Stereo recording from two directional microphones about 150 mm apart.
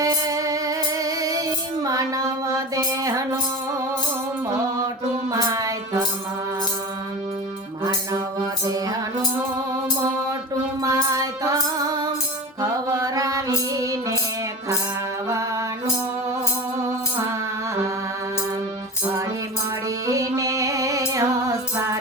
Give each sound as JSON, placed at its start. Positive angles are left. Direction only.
{"t": 0.0, "sound": "music", "side_deg": -25}
{"t": 5.3, "sound": "child singing", "side_deg": -20}
{"t": 8.6, "sound": "music", "side_deg": -25}
{"t": 10.8, "sound": "female singing", "side_deg": -25}
{"t": 12.9, "sound": "mantra", "side_deg": -25}
{"t": 13.7, "sound": "music", "side_deg": -25}
{"t": 15.3, "sound": "music", "side_deg": -20}
{"t": 20.1, "sound": "music", "side_deg": -20}